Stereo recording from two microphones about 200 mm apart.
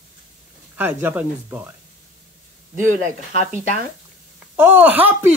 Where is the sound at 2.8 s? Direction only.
40° right (ahead or behind).